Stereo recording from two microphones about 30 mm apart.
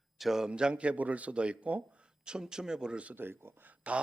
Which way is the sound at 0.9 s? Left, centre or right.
Right.